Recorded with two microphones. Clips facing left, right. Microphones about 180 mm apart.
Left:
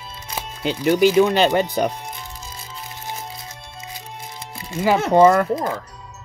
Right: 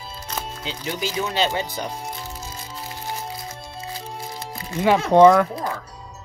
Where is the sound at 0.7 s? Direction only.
60° left (ahead or behind).